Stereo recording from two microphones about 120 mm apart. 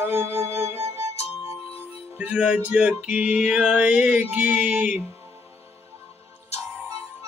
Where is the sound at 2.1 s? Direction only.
10° right (ahead or behind).